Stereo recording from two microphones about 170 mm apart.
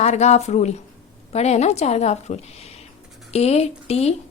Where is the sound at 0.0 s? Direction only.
40° left (ahead or behind).